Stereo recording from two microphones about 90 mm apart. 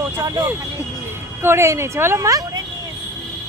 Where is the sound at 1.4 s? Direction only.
30° right (ahead or behind); by 2.6 s 45° right (ahead or behind).